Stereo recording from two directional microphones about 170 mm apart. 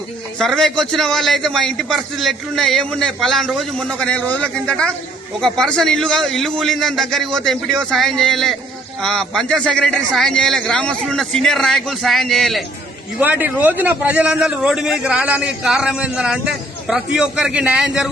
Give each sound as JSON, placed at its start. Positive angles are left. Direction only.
{"t": 0.3, "sound": "a man's voice", "side_deg": 0}
{"t": 13.1, "sound": "a man's voice", "side_deg": -10}